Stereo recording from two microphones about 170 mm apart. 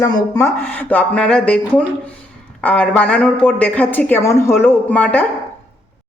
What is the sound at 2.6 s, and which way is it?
A woman's voice, 10° left (ahead or behind).